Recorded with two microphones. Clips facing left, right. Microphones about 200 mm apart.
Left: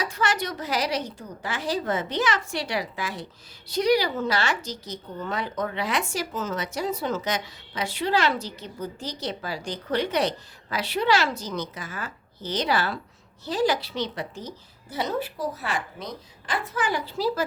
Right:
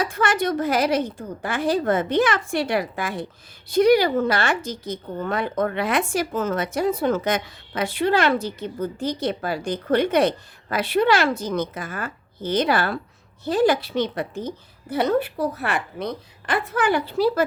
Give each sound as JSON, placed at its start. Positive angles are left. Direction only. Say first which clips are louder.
{"t": 0.0, "sound": "a woman's voice", "louder": "right 5 dB", "side_deg": -55}